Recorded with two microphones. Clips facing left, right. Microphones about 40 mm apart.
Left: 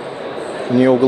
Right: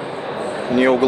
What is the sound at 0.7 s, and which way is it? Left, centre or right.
Speech, right.